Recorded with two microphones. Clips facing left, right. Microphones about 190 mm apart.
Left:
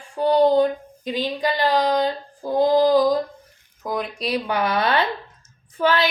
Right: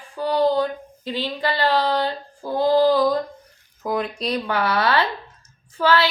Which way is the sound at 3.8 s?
Centre (ahead or behind).